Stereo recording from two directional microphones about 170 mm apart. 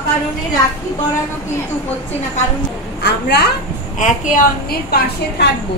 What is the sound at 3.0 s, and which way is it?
Speech, 80° left.